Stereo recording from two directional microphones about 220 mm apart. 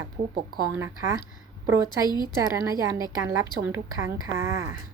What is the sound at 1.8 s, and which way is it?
Speech, 20° left (ahead or behind).